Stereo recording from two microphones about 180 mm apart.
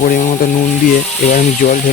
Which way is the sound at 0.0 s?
45° left (ahead or behind).